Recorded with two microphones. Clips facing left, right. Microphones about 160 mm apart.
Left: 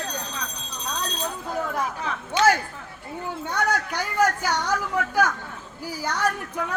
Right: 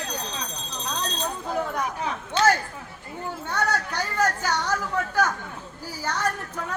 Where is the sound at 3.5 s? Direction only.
15° left (ahead or behind).